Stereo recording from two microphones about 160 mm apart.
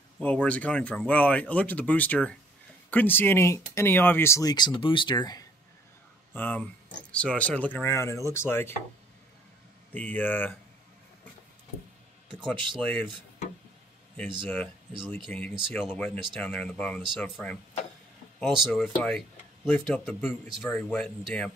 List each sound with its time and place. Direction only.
0.2 s speech: 10° left (ahead or behind); by 5.4 s 25° left (ahead or behind)
6.3 s speech: 10° left (ahead or behind)
9.9 s speech: 10° left (ahead or behind)
14.1 s speech: 10° left (ahead or behind)